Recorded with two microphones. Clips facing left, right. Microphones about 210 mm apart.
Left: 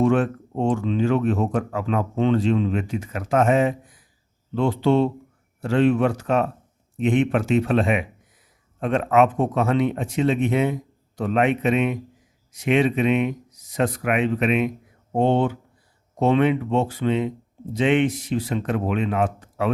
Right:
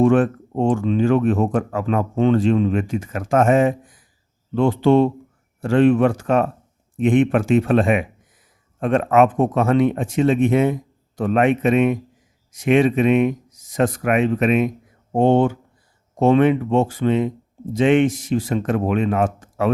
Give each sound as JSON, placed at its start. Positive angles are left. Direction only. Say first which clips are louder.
{"t": 0.0, "sound": "speech", "louder": "right 4 dB", "side_deg": -50}